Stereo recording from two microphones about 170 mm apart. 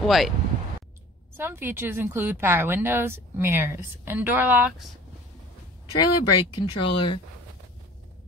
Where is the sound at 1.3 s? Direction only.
15° right (ahead or behind).